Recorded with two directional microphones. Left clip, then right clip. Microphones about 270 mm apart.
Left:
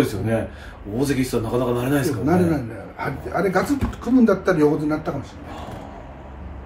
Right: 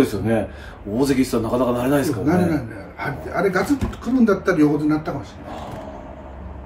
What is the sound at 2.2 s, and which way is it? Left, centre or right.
A man's voice, centre.